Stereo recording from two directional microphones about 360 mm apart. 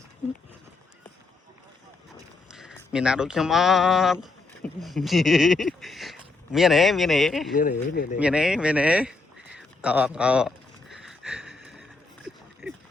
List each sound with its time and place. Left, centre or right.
2.1 s speech: centre
7.5 s speech: left
8.2 s speech: centre
9.6 s a sound: centre